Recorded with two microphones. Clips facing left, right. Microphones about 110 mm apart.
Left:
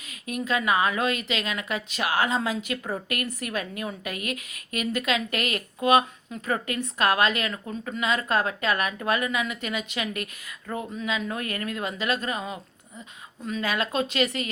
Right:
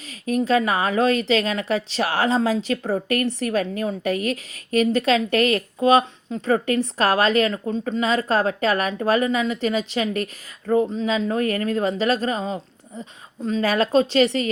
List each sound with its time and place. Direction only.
0.1 s a woman's voice: 35° right (ahead or behind)